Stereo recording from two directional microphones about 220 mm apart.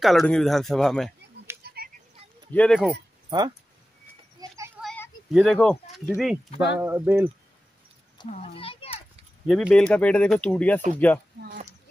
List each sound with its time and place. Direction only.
0.0 s speech: centre (ahead or behind)
1.6 s a sound: 45° right (ahead or behind)
2.5 s speech: 5° left (ahead or behind)
3.3 s speech: 20° right (ahead or behind)
4.8 s a sound: 10° left (ahead or behind)
5.3 s speech: centre (ahead or behind)
6.8 s speech: 10° right (ahead or behind)
8.3 s a child's voice: 25° left (ahead or behind)
9.5 s speech: centre (ahead or behind)